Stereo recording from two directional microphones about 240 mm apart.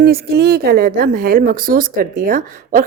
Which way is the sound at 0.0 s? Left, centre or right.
Right.